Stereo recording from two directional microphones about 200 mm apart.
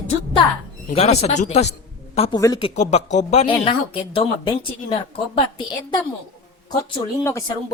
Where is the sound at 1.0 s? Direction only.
30° left (ahead or behind).